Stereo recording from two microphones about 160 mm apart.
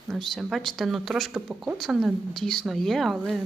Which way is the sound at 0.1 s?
Centre (ahead or behind).